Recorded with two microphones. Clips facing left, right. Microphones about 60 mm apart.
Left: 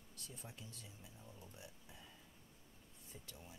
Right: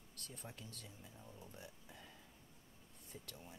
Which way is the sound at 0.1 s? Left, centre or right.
Right.